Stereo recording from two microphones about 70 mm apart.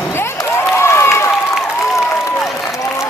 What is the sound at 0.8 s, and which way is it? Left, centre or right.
Run, left.